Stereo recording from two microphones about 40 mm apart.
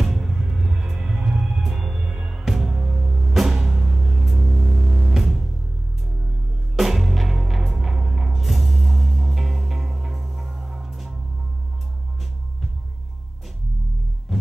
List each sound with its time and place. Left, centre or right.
0.0 s music: centre
1.6 s music: centre
2.0 s music: right
2.3 s music: centre
4.1 s a sound: centre
4.4 s music: right
5.1 s music: centre
6.8 s music: centre